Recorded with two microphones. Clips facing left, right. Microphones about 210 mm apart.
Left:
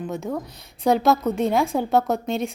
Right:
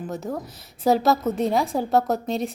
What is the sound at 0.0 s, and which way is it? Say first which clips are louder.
A woman's voice: left 2 dB; centre (ahead or behind).